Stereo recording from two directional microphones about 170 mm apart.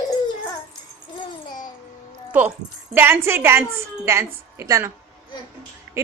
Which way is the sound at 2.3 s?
10° right (ahead or behind).